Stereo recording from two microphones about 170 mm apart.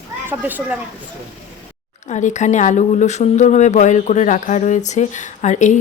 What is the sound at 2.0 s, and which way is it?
Speech, 45° left (ahead or behind).